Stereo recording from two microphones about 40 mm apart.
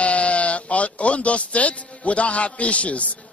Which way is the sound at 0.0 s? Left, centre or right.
Left.